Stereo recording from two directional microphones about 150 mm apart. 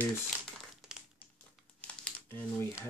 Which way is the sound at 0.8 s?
Centre (ahead or behind).